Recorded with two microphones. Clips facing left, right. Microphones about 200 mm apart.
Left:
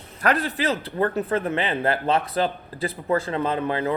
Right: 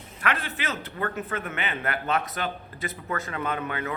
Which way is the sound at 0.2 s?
40° left (ahead or behind).